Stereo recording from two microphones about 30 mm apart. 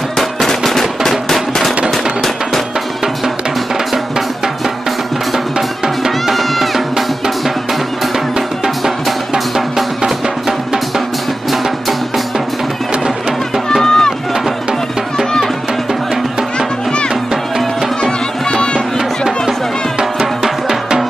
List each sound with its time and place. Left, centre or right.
0.5 s machine gun: centre
6.3 s music: centre
8.6 s music: centre
13.8 s a sound: left
18.5 s music: left
18.9 s music: centre